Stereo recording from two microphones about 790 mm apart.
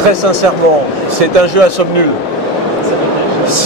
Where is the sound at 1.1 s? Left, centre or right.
Right.